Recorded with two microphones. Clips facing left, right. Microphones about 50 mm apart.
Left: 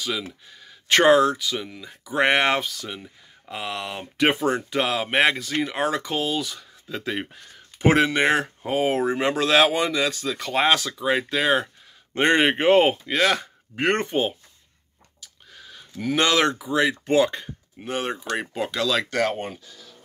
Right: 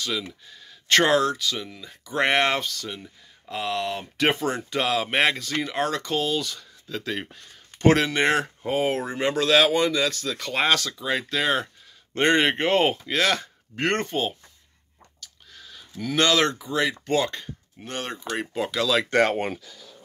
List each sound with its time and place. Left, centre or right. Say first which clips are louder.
0.0 s speech: left 1 dB; centre
15.1 s a sound: left 1 dB; centre
17.0 s speech: left 4 dB; centre
19.0 s speech: right 3 dB; right